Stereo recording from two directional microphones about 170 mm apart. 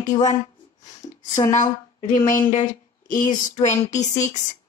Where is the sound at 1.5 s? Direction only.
45° left (ahead or behind).